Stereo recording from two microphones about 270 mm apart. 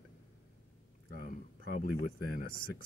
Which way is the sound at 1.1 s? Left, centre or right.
Left.